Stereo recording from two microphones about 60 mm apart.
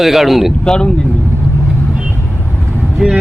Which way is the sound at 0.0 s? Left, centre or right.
Centre.